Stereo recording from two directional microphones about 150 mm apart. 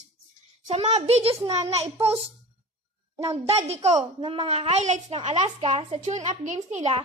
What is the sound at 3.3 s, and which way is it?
Speech, 45° right (ahead or behind).